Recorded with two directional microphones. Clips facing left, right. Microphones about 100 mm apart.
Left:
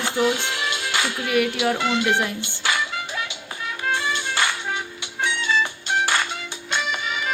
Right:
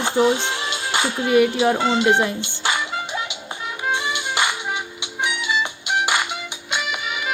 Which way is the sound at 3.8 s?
15° right (ahead or behind).